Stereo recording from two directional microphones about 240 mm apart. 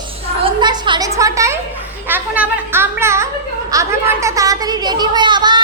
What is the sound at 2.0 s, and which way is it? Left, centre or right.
A child's voice, centre.